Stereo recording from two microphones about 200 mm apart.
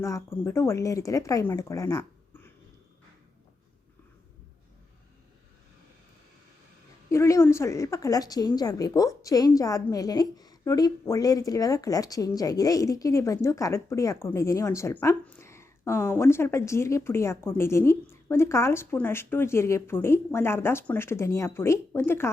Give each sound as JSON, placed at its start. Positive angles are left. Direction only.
{"t": 0.0, "sound": "a woman's voice", "side_deg": 15}
{"t": 7.1, "sound": "a woman's voice", "side_deg": 15}